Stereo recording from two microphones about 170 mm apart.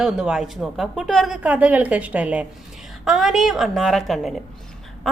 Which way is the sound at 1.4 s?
10° right (ahead or behind).